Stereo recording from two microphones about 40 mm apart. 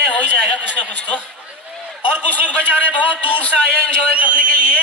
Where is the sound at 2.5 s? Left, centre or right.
Left.